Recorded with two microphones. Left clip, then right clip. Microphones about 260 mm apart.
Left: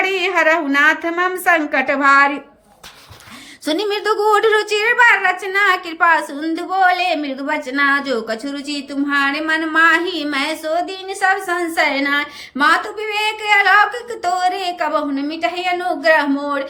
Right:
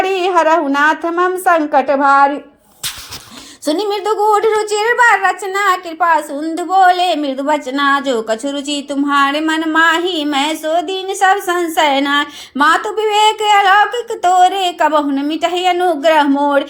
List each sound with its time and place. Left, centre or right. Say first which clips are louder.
0.0 s a sound: right 2 dB; centre
0.4 s a woman's voice: right 2 dB; centre
3.7 s a woman's voice: right 2 dB; centre
4.3 s a woman's voice: right 1 dB; centre
4.7 s a woman's voice: right 2 dB; centre